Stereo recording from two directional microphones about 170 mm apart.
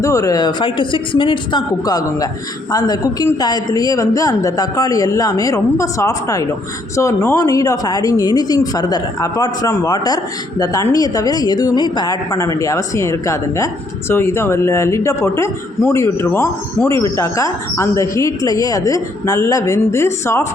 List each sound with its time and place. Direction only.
0.0 s a woman's voice: 20° left (ahead or behind)